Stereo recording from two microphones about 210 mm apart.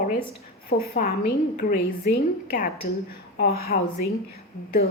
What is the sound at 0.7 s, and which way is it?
Speech, 45° left (ahead or behind).